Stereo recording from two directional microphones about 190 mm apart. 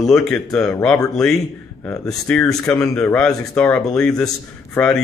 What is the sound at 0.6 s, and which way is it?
Speech, 15° left (ahead or behind).